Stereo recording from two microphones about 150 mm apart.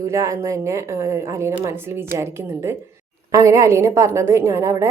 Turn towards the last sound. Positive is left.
turn(degrees=-20)  # may be behind; listen again after turning